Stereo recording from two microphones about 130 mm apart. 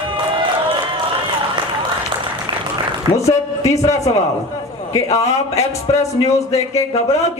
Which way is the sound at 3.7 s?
25° left (ahead or behind).